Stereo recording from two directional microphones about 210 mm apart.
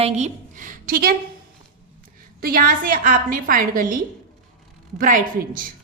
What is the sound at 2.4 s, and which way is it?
A woman's voice, 40° right (ahead or behind).